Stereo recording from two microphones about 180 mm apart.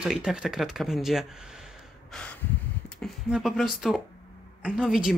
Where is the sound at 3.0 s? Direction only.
Centre (ahead or behind).